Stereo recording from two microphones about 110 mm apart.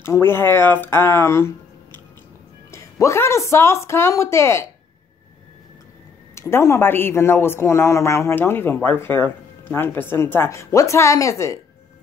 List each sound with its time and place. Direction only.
0.0 s a man's voice: 20° left (ahead or behind)
6.3 s a man's voice: 25° left (ahead or behind)